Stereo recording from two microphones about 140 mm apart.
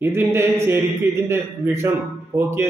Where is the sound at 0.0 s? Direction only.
15° right (ahead or behind).